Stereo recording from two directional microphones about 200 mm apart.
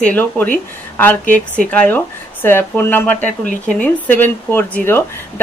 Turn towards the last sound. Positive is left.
turn(degrees=10)  # may be behind; listen again after turning